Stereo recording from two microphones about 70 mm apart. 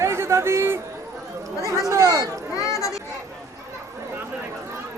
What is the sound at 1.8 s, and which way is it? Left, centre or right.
Speech, right.